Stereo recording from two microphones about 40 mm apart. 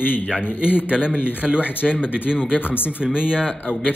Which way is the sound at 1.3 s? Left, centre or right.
Right.